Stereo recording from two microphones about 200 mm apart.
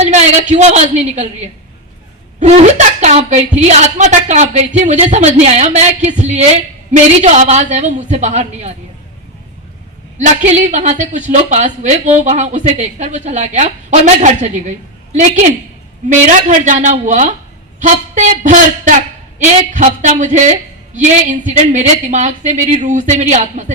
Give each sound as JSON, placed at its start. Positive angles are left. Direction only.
{"t": 0.0, "sound": "a woman's voice", "side_deg": -35}
{"t": 10.2, "sound": "a woman's voice", "side_deg": -35}